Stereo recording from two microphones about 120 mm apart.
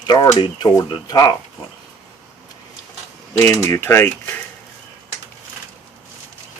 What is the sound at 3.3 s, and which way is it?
Speech, 25° left (ahead or behind).